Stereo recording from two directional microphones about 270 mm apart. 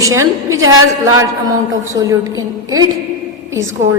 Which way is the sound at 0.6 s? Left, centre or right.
Right.